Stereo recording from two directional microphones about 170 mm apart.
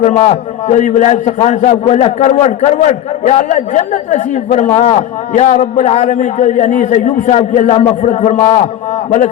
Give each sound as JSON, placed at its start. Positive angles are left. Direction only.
{"t": 0.0, "sound": "a man's voice", "side_deg": 40}